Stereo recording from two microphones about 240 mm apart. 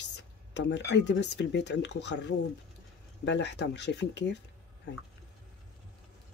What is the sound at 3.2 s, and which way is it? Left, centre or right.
Speech, left.